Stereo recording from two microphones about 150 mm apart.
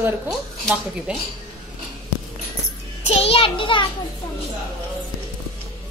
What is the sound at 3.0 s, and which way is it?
Speech, 40° left (ahead or behind).